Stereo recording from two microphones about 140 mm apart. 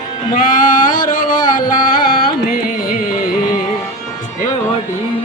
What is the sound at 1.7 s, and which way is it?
Carnatic music, 85° left.